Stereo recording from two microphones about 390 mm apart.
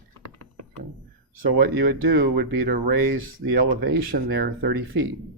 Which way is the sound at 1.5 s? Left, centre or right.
Right.